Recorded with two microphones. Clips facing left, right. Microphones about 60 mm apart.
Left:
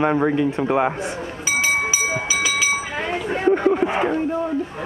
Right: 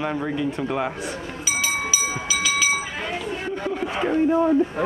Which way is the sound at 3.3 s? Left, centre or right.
Left.